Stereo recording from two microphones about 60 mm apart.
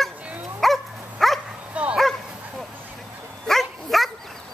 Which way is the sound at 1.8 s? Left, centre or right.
Right.